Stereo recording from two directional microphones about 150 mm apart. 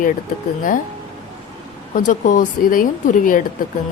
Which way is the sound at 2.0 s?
60° left (ahead or behind).